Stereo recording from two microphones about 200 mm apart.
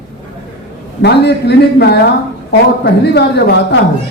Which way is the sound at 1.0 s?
55° left (ahead or behind).